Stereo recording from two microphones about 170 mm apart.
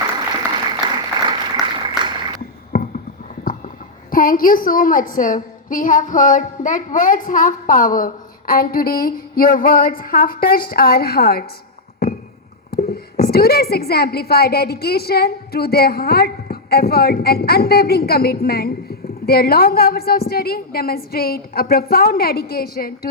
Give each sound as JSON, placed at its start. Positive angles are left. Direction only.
{"t": 0.8, "sound": "applause", "side_deg": -25}
{"t": 2.7, "sound": "a sound", "side_deg": 60}
{"t": 4.1, "sound": "speech", "side_deg": 55}
{"t": 12.7, "sound": "speech", "side_deg": 65}